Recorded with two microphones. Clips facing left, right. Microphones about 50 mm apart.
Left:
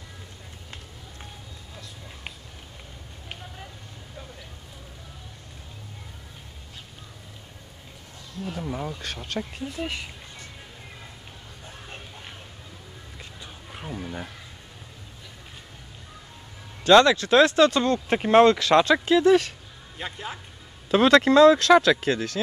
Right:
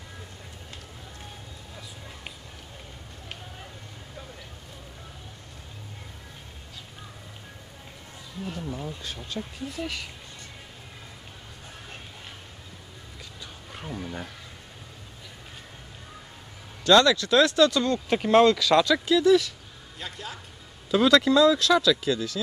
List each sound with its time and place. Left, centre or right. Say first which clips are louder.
8.5 s speech: left 6 dB; left
9.4 s speech: left 1 dB; left
13.7 s a sound: left 1 dB; centre
16.8 s speech: left 3 dB; left
20.0 s speech: left 4 dB; left
20.9 s speech: left 3 dB; left